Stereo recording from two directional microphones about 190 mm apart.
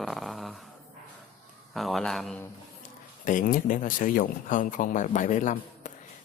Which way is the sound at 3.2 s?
45° left (ahead or behind).